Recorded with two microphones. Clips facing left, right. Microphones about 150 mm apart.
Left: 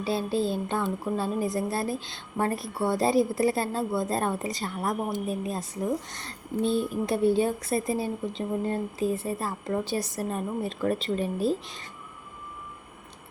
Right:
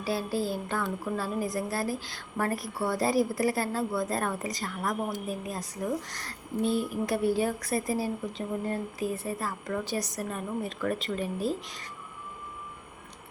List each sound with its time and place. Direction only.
0.0 s speech: 25° left (ahead or behind)